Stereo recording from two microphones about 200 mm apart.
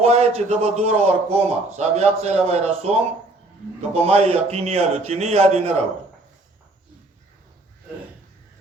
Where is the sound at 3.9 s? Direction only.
30° right (ahead or behind).